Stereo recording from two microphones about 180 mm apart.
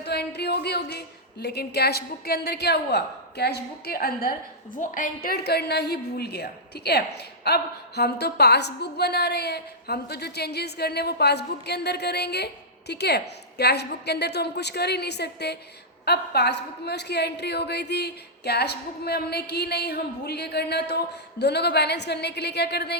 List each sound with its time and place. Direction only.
0.0 s a woman's voice: 65° left (ahead or behind)